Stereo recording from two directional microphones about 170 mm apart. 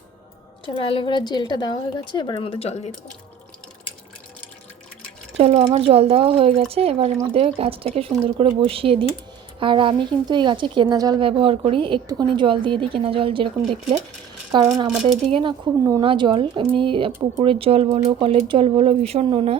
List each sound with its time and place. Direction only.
0.6 s a woman's voice: 30° left (ahead or behind)
5.4 s a woman's voice: 40° right (ahead or behind)
14.5 s a woman's voice: 25° right (ahead or behind)